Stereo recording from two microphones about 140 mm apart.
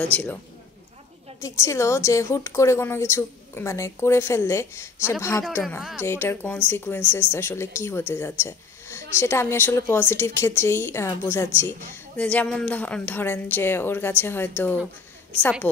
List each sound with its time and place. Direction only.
0.0 s speech: 10° left (ahead or behind)
1.4 s a woman's voice: 20° left (ahead or behind)
5.8 s speech: centre (ahead or behind)
6.0 s speech: 15° left (ahead or behind)